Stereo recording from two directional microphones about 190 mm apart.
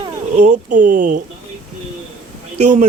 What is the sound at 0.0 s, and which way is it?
Speech, 35° right (ahead or behind).